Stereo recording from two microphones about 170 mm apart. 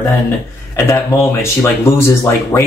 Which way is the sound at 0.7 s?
15° left (ahead or behind).